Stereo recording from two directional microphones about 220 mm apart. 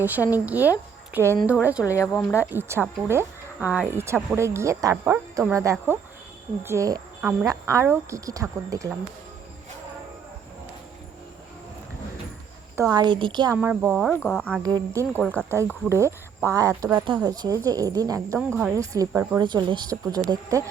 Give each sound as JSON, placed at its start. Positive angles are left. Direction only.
{"t": 0.0, "sound": "speech", "side_deg": -10}
{"t": 1.8, "sound": "speech", "side_deg": 15}
{"t": 2.5, "sound": "speech", "side_deg": -10}
{"t": 12.7, "sound": "speech", "side_deg": -15}
{"t": 13.6, "sound": "speech", "side_deg": -5}
{"t": 14.2, "sound": "speech", "side_deg": 5}